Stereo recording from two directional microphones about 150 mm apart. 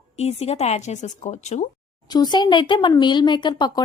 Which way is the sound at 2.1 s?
30° left (ahead or behind).